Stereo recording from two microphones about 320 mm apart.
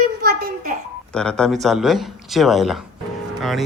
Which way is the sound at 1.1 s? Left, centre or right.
Centre.